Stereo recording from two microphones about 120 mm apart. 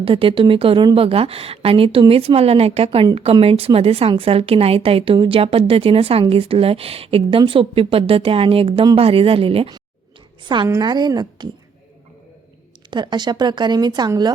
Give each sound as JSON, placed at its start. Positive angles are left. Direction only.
{"t": 0.0, "sound": "speech", "side_deg": -50}
{"t": 10.7, "sound": "a woman's voice", "side_deg": -35}
{"t": 12.9, "sound": "a woman's voice", "side_deg": -40}